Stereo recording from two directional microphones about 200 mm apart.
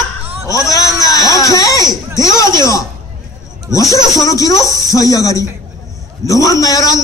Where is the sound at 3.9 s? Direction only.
15° left (ahead or behind).